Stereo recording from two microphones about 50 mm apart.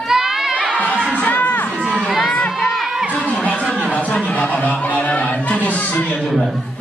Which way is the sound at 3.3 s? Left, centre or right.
Left.